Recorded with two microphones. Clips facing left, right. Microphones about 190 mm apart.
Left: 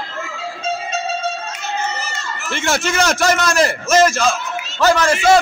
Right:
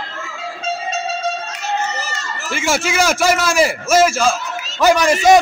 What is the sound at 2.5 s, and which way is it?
A man's voice, 5° right (ahead or behind).